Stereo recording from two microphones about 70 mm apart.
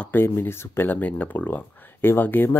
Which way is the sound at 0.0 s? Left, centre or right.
Left.